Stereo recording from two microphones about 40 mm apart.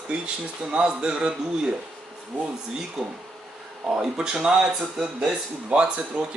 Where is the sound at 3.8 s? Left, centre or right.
Right.